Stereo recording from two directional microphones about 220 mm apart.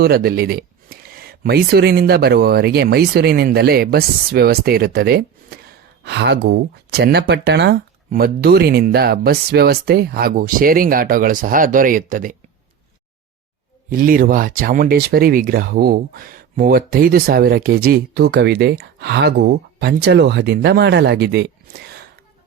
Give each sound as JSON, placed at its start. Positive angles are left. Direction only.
{"t": 0.0, "sound": "speech", "side_deg": -45}
{"t": 13.9, "sound": "speech", "side_deg": -40}